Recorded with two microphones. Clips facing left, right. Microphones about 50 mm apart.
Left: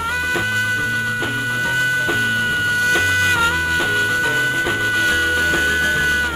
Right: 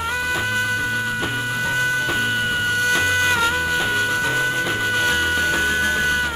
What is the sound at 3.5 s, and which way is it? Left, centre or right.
Music, centre.